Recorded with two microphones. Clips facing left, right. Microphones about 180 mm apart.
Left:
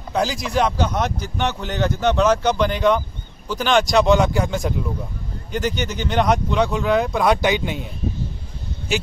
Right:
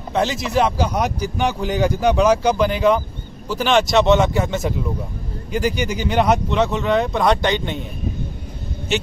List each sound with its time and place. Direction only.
0.1 s speech: centre (ahead or behind)